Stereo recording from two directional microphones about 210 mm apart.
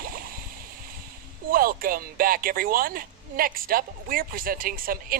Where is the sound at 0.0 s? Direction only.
45° right (ahead or behind).